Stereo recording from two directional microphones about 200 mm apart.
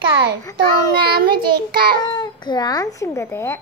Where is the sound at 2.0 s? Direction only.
20° left (ahead or behind).